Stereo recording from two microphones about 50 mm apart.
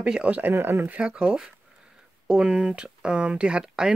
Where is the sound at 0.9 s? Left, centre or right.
Right.